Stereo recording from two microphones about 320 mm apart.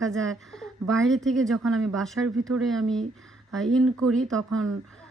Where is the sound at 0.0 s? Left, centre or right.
Centre.